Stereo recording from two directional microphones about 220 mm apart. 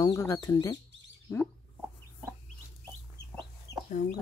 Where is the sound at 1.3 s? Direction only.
15° left (ahead or behind).